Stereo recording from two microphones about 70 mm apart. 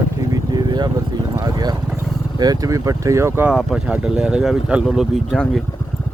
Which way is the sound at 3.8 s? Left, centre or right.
Centre.